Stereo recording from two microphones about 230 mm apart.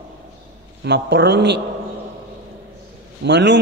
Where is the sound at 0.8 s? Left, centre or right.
Right.